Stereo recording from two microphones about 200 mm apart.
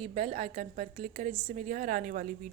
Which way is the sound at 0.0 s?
30° right (ahead or behind).